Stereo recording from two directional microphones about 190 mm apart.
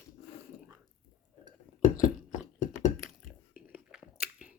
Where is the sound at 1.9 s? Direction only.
40° left (ahead or behind).